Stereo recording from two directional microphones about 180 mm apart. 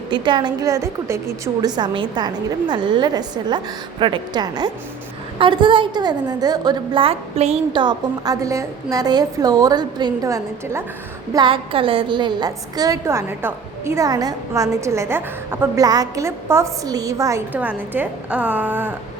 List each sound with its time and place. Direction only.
0.1 s a woman's voice: 25° right (ahead or behind)
11.3 s a woman's voice: 30° right (ahead or behind); by 18.9 s 10° right (ahead or behind)